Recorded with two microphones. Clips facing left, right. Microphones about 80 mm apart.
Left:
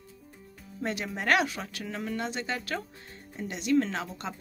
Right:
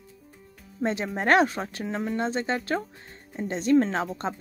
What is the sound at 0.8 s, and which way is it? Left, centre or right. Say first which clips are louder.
Speech: right 5 dB; right.